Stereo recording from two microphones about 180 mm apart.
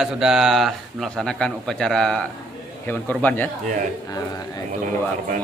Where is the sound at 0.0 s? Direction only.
Centre (ahead or behind).